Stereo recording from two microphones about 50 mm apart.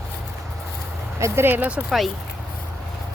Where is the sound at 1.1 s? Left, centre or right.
Right.